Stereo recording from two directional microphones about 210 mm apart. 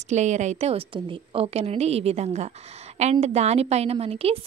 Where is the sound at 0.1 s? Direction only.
35° right (ahead or behind).